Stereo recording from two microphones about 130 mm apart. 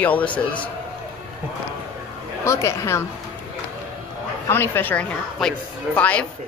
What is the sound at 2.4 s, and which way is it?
Speech, 20° left (ahead or behind).